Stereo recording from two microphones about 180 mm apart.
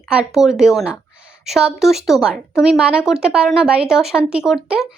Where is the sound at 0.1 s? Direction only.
5° right (ahead or behind).